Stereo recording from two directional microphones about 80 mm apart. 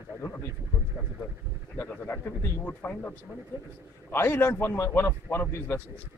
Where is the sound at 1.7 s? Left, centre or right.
Left.